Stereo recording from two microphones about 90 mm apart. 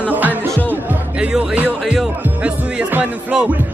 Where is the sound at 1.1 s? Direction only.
10° right (ahead or behind).